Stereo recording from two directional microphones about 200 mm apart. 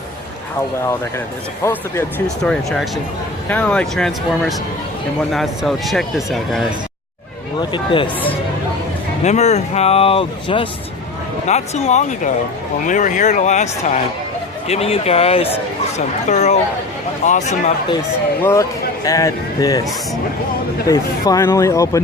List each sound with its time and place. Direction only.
1.6 s speech: 10° left (ahead or behind)
7.6 s speech: 25° left (ahead or behind)
19.0 s speech: 15° left (ahead or behind)
20.8 s speech: 15° left (ahead or behind)